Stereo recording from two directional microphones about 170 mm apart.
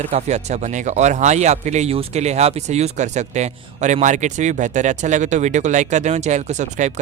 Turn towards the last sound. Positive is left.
turn(degrees=-45)  # may be behind; listen again after turning